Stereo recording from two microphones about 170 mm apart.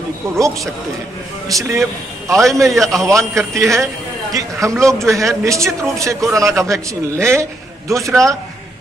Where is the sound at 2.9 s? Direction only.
20° right (ahead or behind).